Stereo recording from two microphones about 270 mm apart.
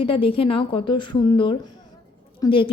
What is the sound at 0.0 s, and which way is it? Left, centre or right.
A woman's voice, centre.